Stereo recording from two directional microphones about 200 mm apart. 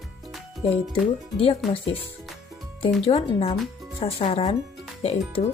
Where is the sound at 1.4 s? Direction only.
30° left (ahead or behind).